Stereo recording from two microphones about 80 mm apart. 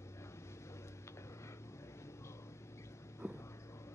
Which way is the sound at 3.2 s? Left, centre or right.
Left.